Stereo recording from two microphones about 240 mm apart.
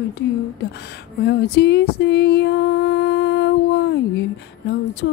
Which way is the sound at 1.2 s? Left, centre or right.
Left.